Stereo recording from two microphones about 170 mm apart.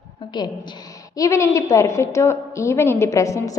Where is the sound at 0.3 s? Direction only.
25° left (ahead or behind).